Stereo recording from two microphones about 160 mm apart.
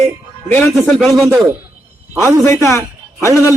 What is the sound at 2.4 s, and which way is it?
Speech, 20° left (ahead or behind).